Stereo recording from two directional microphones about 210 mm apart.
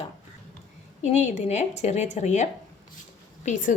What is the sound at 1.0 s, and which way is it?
A woman's voice, 35° left (ahead or behind).